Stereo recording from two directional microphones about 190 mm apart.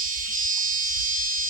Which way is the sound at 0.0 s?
45° right (ahead or behind).